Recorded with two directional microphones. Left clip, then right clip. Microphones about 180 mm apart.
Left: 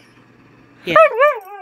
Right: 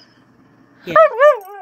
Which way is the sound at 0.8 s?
10° left (ahead or behind).